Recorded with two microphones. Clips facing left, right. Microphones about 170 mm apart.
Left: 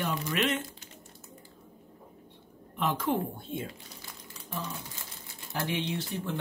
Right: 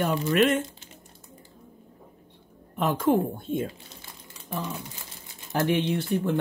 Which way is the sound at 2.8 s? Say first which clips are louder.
Right 6 dB; 45° right (ahead or behind).